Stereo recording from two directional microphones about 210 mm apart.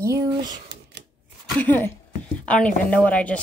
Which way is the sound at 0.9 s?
55° right (ahead or behind).